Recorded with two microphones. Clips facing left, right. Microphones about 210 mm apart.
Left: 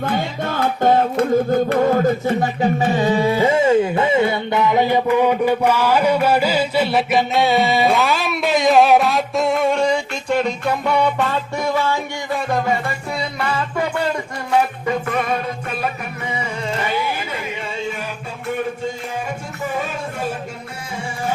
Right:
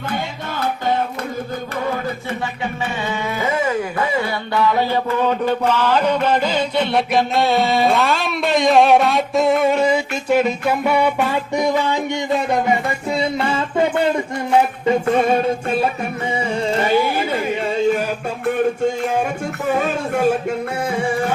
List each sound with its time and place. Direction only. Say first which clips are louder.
0.0 s music: left 4 dB; 50° left (ahead or behind); by 15.4 s 30° right (ahead or behind)
16.7 s carnatic music: right 6 dB; 35° right (ahead or behind)